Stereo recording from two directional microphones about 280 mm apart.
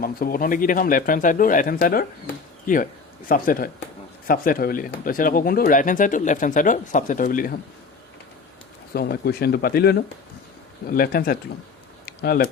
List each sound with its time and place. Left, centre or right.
0.0 s speech: left
8.9 s speech: left
12.0 s typing: left